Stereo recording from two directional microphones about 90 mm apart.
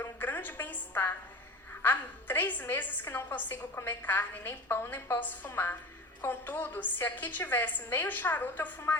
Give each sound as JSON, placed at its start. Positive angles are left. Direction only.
{"t": 0.0, "sound": "music", "side_deg": 20}
{"t": 1.8, "sound": "a woman's voice", "side_deg": 25}